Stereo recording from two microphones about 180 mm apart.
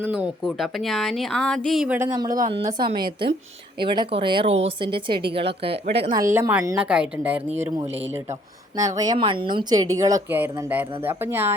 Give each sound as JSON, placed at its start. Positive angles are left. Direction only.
{"t": 0.0, "sound": "a woman's voice", "side_deg": -5}
{"t": 2.0, "sound": "speech", "side_deg": -20}
{"t": 6.6, "sound": "a woman's voice", "side_deg": -10}
{"t": 9.0, "sound": "a woman's voice", "side_deg": -25}